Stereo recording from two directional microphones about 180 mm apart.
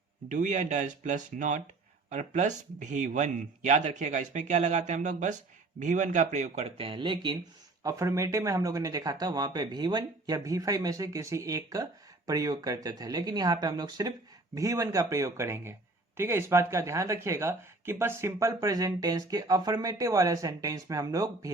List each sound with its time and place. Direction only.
0.3 s speech: 45° right (ahead or behind); by 21.5 s 20° right (ahead or behind)